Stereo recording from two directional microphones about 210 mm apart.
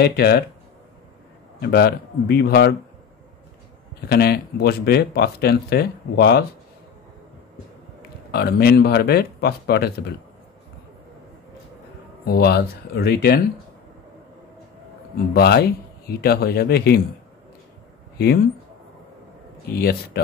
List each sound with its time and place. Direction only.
0.0 s speech: 50° left (ahead or behind)
1.6 s speech: 50° left (ahead or behind)
4.1 s speech: 50° left (ahead or behind)
8.3 s speech: 50° left (ahead or behind)
12.3 s speech: 50° left (ahead or behind)
15.1 s speech: 50° left (ahead or behind)
18.1 s speech: 50° left (ahead or behind)
19.7 s speech: 50° left (ahead or behind)